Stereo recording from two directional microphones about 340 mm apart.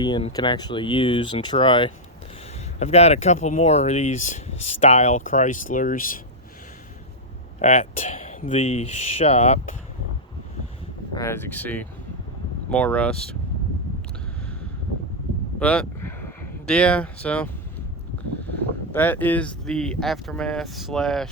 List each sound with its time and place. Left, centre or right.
0.0 s speech: centre
7.6 s speech: centre
11.1 s speech: centre
15.5 s a sound: centre
18.9 s speech: centre